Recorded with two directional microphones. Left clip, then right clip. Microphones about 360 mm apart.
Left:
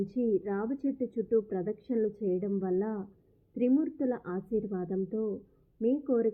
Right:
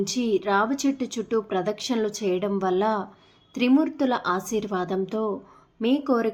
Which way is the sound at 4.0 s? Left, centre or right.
Centre.